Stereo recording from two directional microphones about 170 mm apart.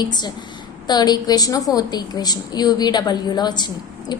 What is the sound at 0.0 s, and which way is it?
A woman's voice, 25° left (ahead or behind).